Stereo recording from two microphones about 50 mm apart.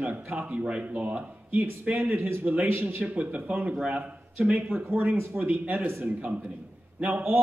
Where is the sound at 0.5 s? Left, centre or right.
Right.